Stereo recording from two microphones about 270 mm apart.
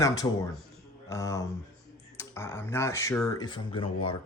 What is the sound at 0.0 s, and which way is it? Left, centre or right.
Speech, centre.